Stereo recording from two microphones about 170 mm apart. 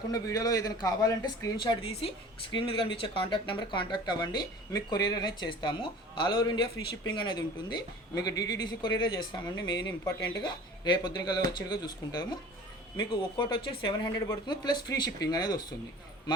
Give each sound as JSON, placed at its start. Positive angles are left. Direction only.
{"t": 0.1, "sound": "speech", "side_deg": 20}